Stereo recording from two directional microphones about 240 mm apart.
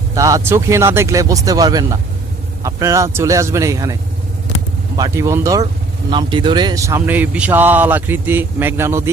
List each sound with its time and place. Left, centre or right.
0.1 s speech: centre
4.9 s speech: centre